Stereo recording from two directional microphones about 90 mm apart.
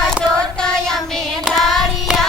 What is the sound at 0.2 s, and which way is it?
Child singing, 10° left (ahead or behind).